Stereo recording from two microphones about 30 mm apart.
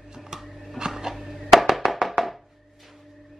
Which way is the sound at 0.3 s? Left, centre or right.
Centre.